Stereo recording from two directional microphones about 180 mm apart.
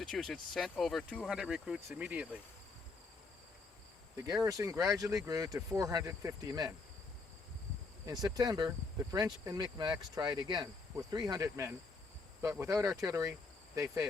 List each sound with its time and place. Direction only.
0.1 s speech: 5° left (ahead or behind)
4.4 s speech: 20° right (ahead or behind)
8.0 s speech: 20° right (ahead or behind)